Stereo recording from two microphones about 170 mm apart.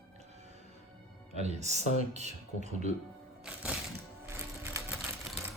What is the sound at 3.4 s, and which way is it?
Music, 5° right (ahead or behind).